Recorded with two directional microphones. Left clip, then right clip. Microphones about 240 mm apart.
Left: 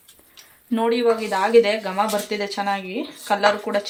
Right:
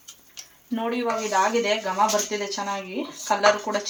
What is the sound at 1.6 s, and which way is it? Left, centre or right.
Speech, left.